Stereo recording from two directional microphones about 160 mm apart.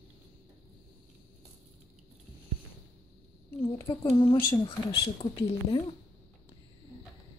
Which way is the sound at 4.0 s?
35° left (ahead or behind).